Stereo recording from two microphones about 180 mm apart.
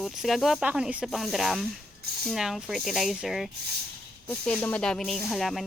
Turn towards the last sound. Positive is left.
turn(degrees=0)  # may be behind; listen again after turning